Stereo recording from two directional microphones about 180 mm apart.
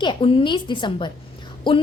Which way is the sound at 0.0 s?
25° left (ahead or behind).